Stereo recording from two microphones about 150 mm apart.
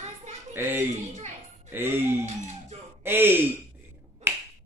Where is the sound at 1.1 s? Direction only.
50° right (ahead or behind).